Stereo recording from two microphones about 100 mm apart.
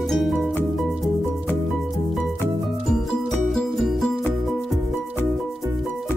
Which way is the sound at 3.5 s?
Centre (ahead or behind).